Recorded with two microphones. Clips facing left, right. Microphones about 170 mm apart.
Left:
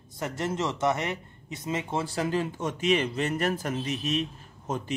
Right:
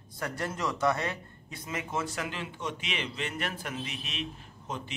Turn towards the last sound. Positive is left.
turn(degrees=45)  # may be behind; listen again after turning